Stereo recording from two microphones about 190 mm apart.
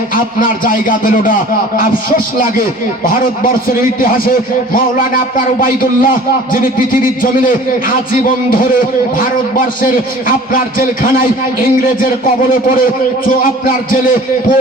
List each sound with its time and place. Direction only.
0.3 s a man's voice: 45° left (ahead or behind)